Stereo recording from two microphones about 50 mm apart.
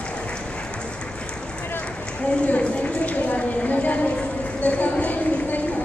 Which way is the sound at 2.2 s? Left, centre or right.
Left.